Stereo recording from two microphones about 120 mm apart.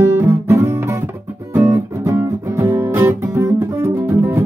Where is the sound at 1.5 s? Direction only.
15° right (ahead or behind).